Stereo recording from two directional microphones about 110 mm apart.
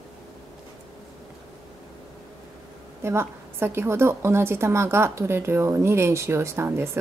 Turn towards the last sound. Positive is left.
turn(degrees=-25)  # may be behind; listen again after turning